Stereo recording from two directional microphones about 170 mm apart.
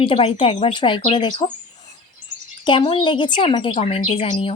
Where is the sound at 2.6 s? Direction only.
30° left (ahead or behind).